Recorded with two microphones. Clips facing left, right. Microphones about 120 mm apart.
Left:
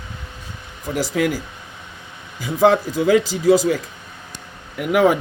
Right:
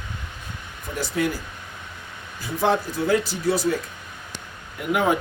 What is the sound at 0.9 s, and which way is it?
Speech, 90° left.